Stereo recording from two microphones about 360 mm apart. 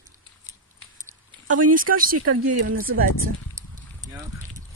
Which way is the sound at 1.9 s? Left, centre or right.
Right.